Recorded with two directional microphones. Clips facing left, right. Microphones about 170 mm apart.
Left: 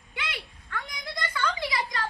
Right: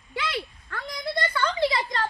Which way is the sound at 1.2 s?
55° right (ahead or behind).